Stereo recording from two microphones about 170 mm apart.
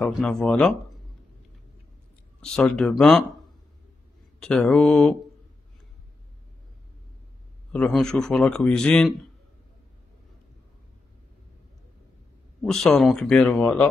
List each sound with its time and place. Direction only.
0.0 s a man's voice: 5° left (ahead or behind)
2.4 s a man's voice: 5° left (ahead or behind)
4.4 s a man's voice: 5° left (ahead or behind)
7.7 s a man's voice: 5° left (ahead or behind)
12.6 s a man's voice: centre (ahead or behind)